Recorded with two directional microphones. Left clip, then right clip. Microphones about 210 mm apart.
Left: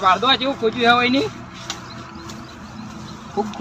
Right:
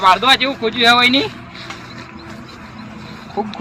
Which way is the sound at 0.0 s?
5° right (ahead or behind).